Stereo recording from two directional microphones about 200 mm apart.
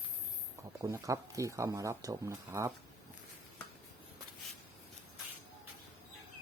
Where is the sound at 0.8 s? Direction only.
15° right (ahead or behind).